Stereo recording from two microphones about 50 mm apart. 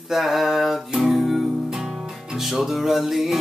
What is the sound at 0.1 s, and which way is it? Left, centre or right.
Music, centre.